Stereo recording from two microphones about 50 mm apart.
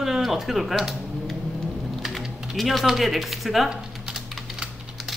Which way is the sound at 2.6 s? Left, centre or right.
Centre.